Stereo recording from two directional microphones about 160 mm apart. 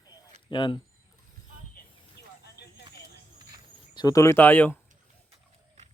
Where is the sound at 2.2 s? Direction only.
90° left.